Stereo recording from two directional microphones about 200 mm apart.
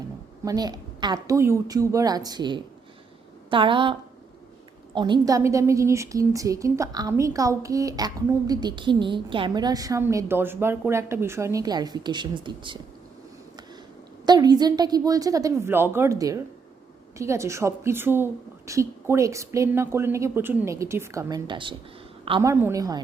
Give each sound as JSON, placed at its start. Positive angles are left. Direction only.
{"t": 0.4, "sound": "a woman's voice", "side_deg": -20}
{"t": 4.9, "sound": "a woman's voice", "side_deg": -20}
{"t": 14.3, "sound": "a woman's voice", "side_deg": -20}